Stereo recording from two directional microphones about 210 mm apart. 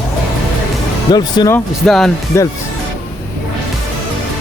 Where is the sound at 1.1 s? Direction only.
20° left (ahead or behind).